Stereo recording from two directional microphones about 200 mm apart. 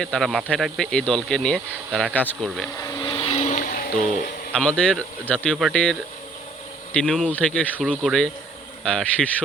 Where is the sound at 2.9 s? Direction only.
20° left (ahead or behind); by 4.3 s 40° left (ahead or behind).